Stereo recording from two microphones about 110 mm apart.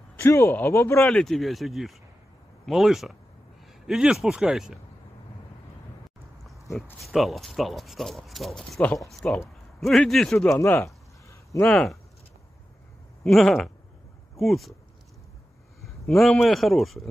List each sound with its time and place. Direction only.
0.2 s speech: 20° left (ahead or behind)
1.0 s speech: 5° left (ahead or behind)
6.7 s speech: centre (ahead or behind)
10.6 s speech: 25° left (ahead or behind)
11.6 s speech: 5° left (ahead or behind)
13.2 s speech: 5° left (ahead or behind)
16.1 s speech: centre (ahead or behind)